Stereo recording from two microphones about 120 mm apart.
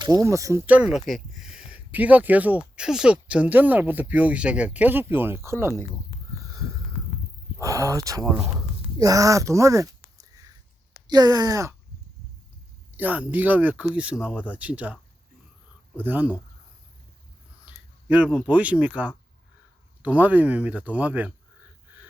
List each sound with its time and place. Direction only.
0.0 s speech: 30° right (ahead or behind)
0.6 s speech: 10° right (ahead or behind)
6.3 s a sound: 30° right (ahead or behind)
7.6 s speech: 25° right (ahead or behind)
8.5 s a sound: 30° right (ahead or behind)
11.0 s speech: 35° right (ahead or behind)
13.0 s speech: 15° right (ahead or behind)
18.1 s speech: 10° right (ahead or behind)